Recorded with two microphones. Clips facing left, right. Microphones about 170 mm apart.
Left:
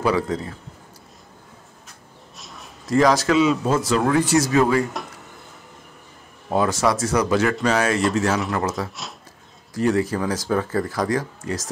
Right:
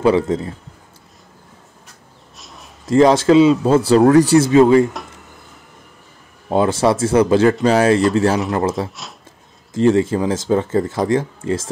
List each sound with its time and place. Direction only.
0.0 s speech: 25° right (ahead or behind)
2.3 s a sound: centre (ahead or behind)
2.9 s speech: 25° right (ahead or behind)
6.5 s speech: 25° right (ahead or behind)